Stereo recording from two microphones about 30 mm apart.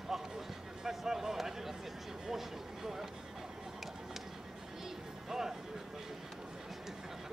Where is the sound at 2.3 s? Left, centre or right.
Centre.